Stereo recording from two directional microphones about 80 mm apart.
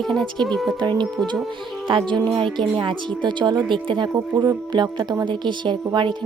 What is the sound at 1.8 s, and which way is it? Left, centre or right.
A woman's voice, right.